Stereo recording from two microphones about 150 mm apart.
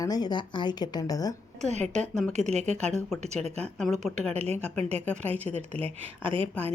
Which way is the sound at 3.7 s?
5° left (ahead or behind).